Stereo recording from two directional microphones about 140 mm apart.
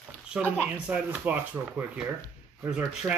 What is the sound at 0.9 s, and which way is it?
Speech, 10° right (ahead or behind).